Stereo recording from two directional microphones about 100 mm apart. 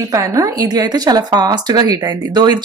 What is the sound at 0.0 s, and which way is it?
Speech, 35° right (ahead or behind).